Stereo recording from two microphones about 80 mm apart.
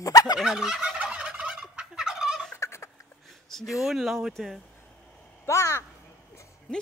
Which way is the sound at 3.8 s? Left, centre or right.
Centre.